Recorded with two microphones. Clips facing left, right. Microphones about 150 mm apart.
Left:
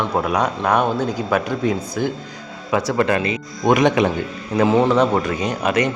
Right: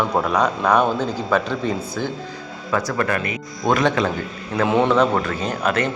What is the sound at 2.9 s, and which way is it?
Speech, 25° left (ahead or behind).